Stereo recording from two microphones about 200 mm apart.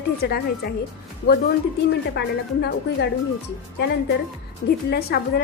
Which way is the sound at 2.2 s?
55° left (ahead or behind).